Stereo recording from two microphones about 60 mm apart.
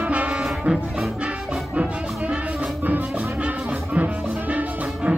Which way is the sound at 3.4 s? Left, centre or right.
Right.